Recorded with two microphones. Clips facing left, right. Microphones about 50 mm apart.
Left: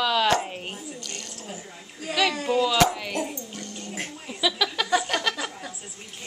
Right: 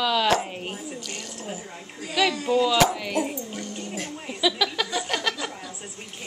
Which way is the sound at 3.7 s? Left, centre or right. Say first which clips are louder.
Right 3 dB; right.